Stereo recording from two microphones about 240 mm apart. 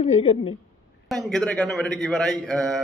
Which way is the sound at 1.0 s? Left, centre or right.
Centre.